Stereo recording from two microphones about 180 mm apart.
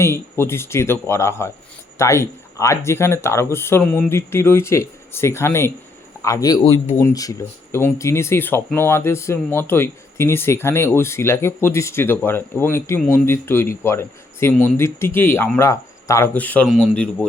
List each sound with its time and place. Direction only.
0.0 s a man's voice: 15° left (ahead or behind)